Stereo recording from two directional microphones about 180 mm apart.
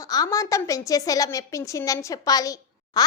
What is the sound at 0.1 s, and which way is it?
A woman's voice, 20° left (ahead or behind).